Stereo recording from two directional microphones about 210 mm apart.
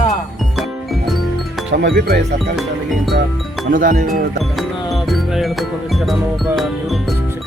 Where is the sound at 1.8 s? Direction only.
55° right (ahead or behind).